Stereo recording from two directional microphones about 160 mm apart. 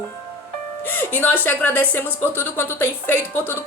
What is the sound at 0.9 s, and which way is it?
Speech, 10° left (ahead or behind).